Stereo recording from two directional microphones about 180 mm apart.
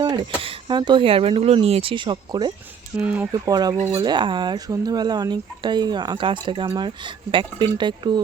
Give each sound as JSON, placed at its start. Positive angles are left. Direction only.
{"t": 0.0, "sound": "speech", "side_deg": -25}
{"t": 3.0, "sound": "speech", "side_deg": -5}
{"t": 3.4, "sound": "speech", "side_deg": -20}